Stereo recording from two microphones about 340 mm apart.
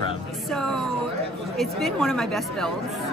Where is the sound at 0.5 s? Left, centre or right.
Centre.